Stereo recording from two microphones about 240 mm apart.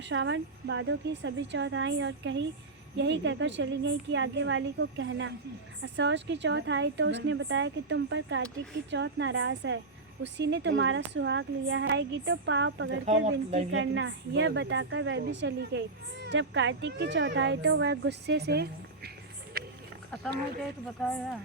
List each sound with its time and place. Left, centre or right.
0.0 s a woman's voice: right
13.2 s a woman's voice: right
13.7 s a woman's voice: right
20.8 s a woman's voice: centre